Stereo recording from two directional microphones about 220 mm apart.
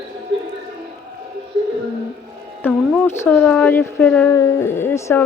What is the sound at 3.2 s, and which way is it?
Speech, 5° left (ahead or behind).